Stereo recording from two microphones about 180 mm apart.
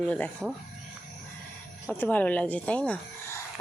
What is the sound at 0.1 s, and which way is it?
Speech, 5° left (ahead or behind).